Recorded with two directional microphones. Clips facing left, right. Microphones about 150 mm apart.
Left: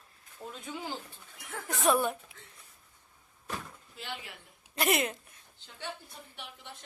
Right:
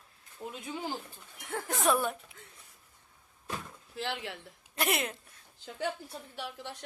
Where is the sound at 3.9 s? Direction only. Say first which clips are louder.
Right 7 dB; 90° right.